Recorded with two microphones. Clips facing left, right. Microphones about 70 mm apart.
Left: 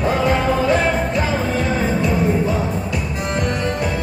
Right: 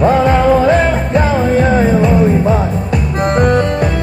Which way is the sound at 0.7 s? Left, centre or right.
Right.